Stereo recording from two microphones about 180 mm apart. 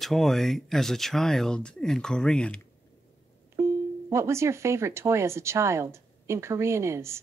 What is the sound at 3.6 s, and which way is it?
Music, 15° right (ahead or behind).